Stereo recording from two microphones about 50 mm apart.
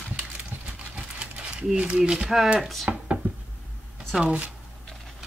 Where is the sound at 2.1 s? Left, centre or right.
Centre.